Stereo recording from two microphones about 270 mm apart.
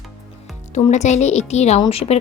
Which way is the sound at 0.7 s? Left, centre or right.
Left.